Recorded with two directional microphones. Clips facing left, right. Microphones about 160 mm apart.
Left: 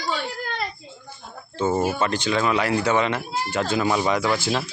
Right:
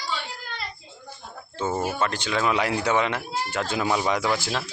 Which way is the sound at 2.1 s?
5° right (ahead or behind).